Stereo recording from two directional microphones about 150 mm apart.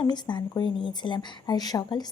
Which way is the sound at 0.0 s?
30° left (ahead or behind).